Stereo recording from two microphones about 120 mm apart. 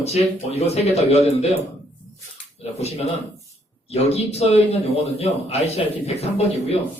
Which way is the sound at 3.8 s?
60° left (ahead or behind).